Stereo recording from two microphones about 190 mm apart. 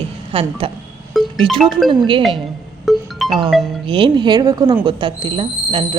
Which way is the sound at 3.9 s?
25° right (ahead or behind).